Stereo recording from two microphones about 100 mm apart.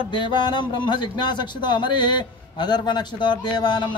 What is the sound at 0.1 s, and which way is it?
Speech, 50° left (ahead or behind).